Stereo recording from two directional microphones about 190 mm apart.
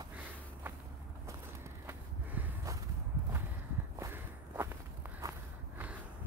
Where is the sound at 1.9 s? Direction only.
10° right (ahead or behind).